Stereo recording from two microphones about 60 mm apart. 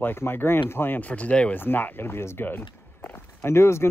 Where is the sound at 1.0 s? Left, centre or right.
Left.